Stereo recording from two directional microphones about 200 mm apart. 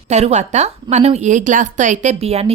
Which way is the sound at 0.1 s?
35° right (ahead or behind).